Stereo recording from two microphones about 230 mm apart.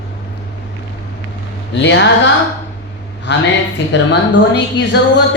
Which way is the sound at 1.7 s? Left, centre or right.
Left.